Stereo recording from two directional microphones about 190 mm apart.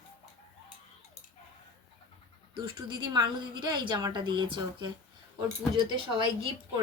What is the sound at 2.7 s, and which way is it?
A woman's voice, 20° right (ahead or behind).